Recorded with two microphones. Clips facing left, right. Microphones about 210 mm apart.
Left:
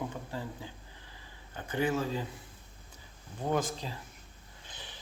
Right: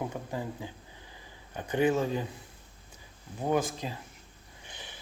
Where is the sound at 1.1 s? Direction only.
15° right (ahead or behind).